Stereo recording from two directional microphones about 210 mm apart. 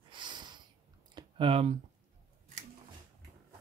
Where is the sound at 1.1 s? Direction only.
25° right (ahead or behind).